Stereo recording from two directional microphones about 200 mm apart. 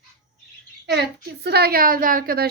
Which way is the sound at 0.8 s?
55° right (ahead or behind).